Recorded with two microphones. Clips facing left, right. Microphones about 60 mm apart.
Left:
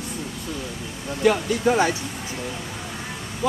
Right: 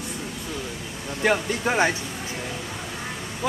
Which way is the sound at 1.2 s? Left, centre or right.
Right.